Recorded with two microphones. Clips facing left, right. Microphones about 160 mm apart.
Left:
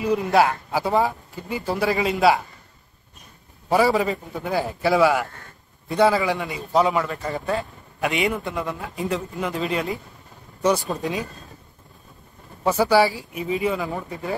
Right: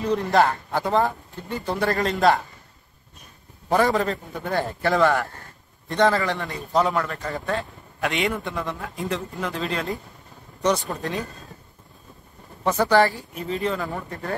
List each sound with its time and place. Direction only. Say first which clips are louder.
0.0 s a man's voice: left 1 dB; 5° left (ahead or behind)
3.6 s a man's voice: left 1 dB; 5° left (ahead or behind)
10.9 s speech: left 2 dB; 15° left (ahead or behind)
12.6 s speech: left 1 dB; 10° left (ahead or behind)